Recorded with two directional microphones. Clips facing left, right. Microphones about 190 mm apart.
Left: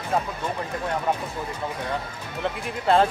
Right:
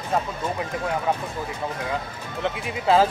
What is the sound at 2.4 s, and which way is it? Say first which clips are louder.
Speech: right 1 dB; centre (ahead or behind).